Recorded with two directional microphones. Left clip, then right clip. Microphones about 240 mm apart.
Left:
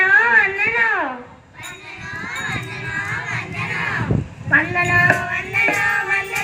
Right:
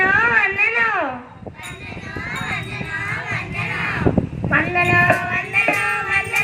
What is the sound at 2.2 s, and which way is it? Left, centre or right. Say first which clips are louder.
Music: right 1 dB; centre.